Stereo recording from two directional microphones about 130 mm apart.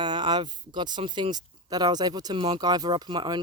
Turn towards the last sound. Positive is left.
turn(degrees=-35)  # may be behind; listen again after turning